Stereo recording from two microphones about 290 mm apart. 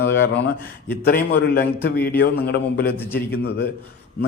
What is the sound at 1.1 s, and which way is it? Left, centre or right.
A man's voice, left.